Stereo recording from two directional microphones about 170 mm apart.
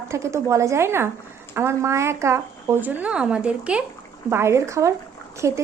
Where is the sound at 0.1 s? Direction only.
15° right (ahead or behind).